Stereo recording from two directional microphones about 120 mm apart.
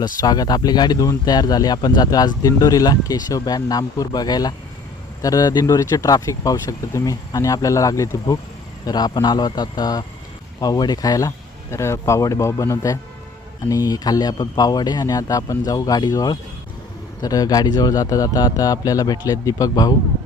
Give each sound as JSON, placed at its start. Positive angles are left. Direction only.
{"t": 0.2, "sound": "speech", "side_deg": 35}